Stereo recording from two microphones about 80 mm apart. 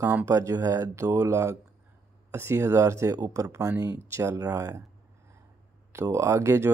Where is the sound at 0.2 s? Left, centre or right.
Right.